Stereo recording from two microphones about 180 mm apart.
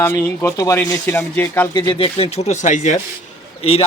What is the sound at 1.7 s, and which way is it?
A man's voice, 25° left (ahead or behind).